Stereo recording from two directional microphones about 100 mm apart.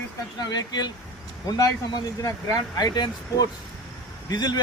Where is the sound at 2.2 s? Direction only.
35° left (ahead or behind).